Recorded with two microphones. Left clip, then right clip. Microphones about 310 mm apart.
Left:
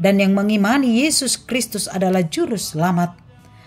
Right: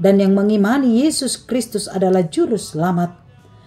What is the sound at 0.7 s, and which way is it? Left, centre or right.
A woman's voice, left.